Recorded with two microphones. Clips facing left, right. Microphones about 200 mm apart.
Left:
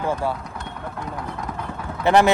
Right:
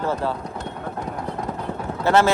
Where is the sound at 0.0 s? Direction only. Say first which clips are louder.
Even; 10° left (ahead or behind).